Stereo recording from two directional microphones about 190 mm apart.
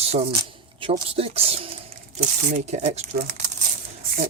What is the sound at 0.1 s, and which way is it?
Speech, 35° right (ahead or behind).